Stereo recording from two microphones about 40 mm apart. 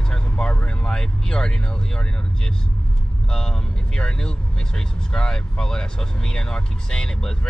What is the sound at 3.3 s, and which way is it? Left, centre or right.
Speech, centre.